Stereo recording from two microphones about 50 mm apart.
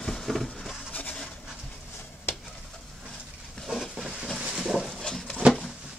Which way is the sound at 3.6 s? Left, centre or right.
Centre.